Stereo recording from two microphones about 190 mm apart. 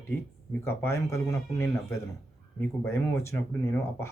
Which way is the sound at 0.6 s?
15° left (ahead or behind).